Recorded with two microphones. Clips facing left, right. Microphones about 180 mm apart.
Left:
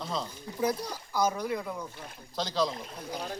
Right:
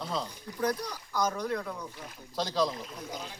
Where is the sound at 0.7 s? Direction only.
30° left (ahead or behind).